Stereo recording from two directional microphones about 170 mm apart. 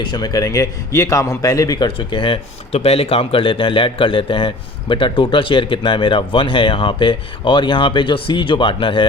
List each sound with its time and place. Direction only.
0.0 s a man's voice: 25° left (ahead or behind)